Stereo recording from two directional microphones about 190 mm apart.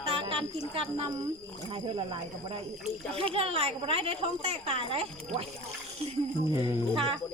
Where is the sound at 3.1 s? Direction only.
30° right (ahead or behind).